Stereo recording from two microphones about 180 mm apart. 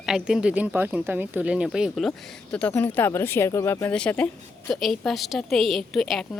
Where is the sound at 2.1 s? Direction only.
10° left (ahead or behind).